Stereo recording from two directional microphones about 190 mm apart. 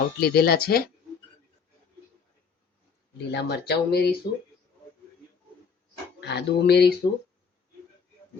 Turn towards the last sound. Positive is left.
turn(degrees=60)  # may be behind; listen again after turning